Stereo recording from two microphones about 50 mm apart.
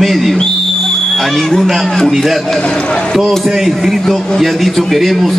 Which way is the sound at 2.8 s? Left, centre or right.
Centre.